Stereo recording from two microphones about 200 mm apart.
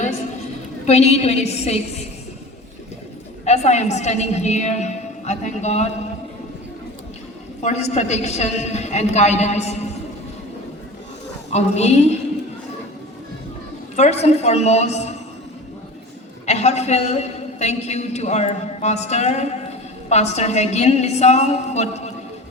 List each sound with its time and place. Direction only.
0.9 s a man's voice: 30° left (ahead or behind)
3.4 s a man's voice: 35° left (ahead or behind)
7.6 s a man's voice: 35° left (ahead or behind)
11.5 s a man's voice: 35° left (ahead or behind)
13.9 s a man's voice: 35° left (ahead or behind)
16.5 s a man's voice: 35° left (ahead or behind)